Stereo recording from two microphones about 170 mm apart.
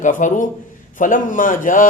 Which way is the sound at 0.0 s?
50° left (ahead or behind).